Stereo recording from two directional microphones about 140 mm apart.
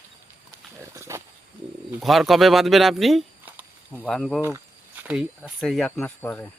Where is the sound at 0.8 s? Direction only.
20° right (ahead or behind).